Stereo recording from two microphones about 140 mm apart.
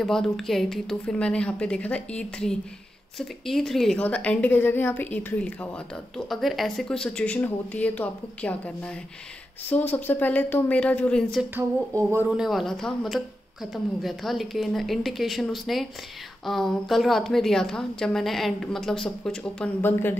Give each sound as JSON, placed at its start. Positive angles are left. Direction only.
{"t": 0.0, "sound": "a woman's voice", "side_deg": 0}
{"t": 11.5, "sound": "a sound", "side_deg": -15}
{"t": 12.4, "sound": "a woman's voice", "side_deg": 0}